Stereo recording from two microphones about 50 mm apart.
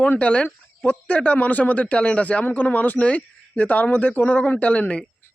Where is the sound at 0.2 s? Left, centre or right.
Left.